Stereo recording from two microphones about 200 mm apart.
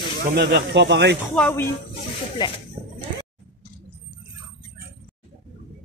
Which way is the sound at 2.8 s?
40° right (ahead or behind).